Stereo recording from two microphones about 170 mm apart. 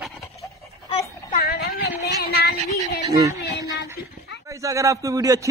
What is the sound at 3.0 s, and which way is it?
Speech, 20° right (ahead or behind).